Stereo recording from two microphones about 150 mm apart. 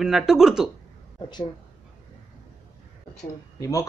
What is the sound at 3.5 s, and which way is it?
Speech, 20° left (ahead or behind).